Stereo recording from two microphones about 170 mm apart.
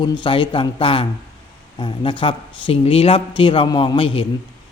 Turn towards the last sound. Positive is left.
turn(degrees=30)  # may be behind; listen again after turning